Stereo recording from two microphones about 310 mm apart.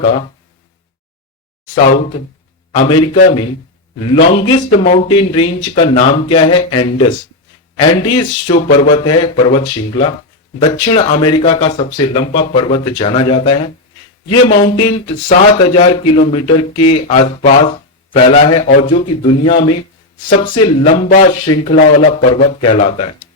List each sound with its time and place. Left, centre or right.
0.0 s speech: centre
1.8 s speech: centre
20.8 s speech: left